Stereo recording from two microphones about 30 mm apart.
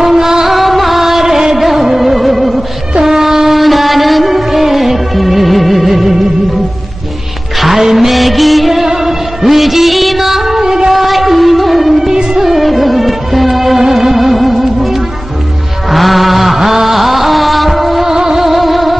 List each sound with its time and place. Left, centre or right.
0.0 s music: centre
0.5 s music: centre
3.0 s a sound: centre
7.5 s music of bollywood: centre
11.0 s music: centre
18.0 s music: centre
18.4 s music: centre